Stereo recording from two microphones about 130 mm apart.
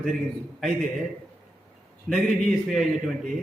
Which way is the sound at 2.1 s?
Centre (ahead or behind).